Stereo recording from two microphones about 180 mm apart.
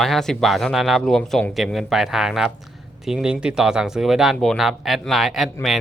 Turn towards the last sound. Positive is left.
turn(degrees=0)  # may be behind; listen again after turning